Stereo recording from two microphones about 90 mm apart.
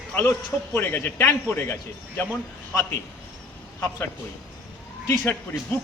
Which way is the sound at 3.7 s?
25° left (ahead or behind).